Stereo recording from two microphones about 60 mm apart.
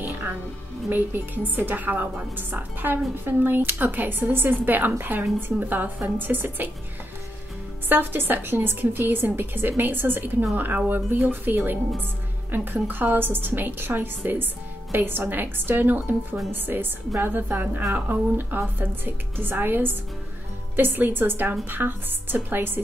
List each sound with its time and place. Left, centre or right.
0.8 s a woman's voice: right
7.9 s a woman's voice: right